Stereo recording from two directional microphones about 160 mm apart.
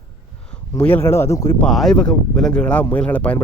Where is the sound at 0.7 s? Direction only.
15° left (ahead or behind).